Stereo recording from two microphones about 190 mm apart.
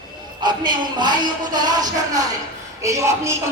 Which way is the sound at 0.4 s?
25° right (ahead or behind).